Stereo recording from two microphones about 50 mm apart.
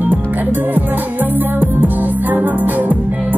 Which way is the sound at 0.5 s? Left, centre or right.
Right.